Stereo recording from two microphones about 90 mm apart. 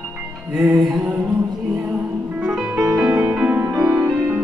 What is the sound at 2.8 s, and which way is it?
Music, 40° right (ahead or behind).